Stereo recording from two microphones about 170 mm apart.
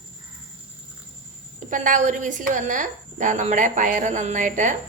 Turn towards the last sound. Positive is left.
turn(degrees=-45)  # may be behind; listen again after turning